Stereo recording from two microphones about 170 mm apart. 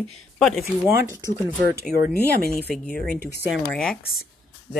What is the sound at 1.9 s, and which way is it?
Speech, 65° left (ahead or behind).